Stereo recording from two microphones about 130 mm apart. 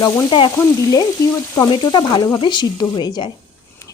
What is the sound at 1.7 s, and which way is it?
A woman's voice, 35° left (ahead or behind).